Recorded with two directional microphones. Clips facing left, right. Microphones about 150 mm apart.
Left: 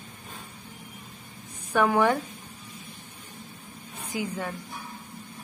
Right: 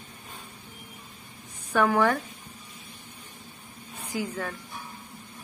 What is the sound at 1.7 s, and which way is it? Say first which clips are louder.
Speech: left 1 dB; 20° left (ahead or behind).